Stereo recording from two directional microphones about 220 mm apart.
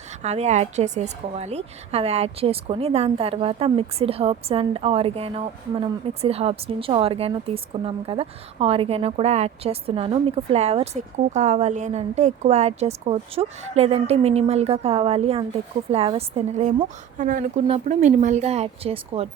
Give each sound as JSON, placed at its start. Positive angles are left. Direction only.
{"t": 0.2, "sound": "a woman's voice", "side_deg": -30}